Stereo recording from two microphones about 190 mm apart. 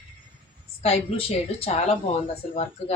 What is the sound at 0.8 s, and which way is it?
Speech, 30° left (ahead or behind).